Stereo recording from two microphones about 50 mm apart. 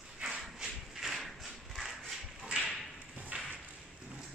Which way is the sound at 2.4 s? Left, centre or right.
Centre.